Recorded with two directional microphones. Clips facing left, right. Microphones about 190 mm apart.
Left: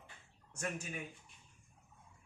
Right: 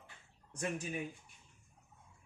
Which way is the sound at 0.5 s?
15° right (ahead or behind).